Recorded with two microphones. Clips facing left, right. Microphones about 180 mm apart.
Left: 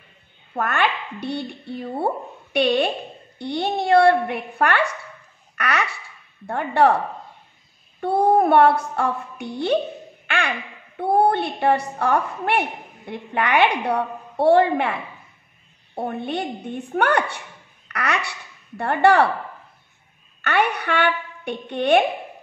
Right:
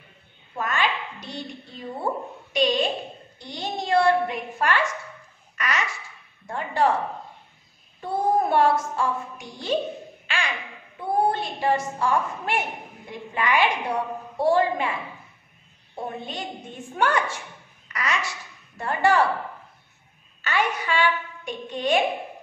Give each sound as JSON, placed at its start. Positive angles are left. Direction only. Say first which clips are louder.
{"t": 0.6, "sound": "a woman's voice", "louder": "left 4 dB", "side_deg": 60}
{"t": 8.0, "sound": "a woman's voice", "louder": "left 6 dB", "side_deg": 60}
{"t": 10.2, "sound": "a sound", "louder": "left 5 dB", "side_deg": 60}
{"t": 11.0, "sound": "a woman's voice", "louder": "left 5 dB", "side_deg": 65}
{"t": 20.4, "sound": "a woman's voice", "louder": "left 4 dB", "side_deg": 65}